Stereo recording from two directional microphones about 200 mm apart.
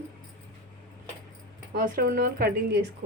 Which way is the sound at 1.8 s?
45° right (ahead or behind).